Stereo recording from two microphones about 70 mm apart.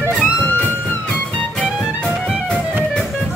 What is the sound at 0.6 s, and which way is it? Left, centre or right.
Music, centre.